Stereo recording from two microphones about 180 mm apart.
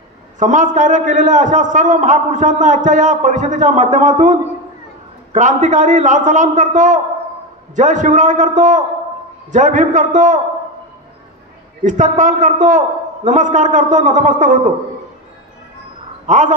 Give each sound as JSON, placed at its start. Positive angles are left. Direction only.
{"t": 0.4, "sound": "a man's voice", "side_deg": -45}
{"t": 11.8, "sound": "a man's voice", "side_deg": -45}
{"t": 16.3, "sound": "a man's voice", "side_deg": -45}